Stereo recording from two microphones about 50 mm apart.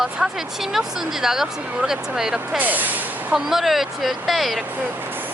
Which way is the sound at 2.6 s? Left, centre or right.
Right.